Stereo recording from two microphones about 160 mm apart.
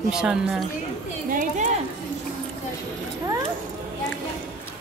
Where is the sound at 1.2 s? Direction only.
55° right (ahead or behind).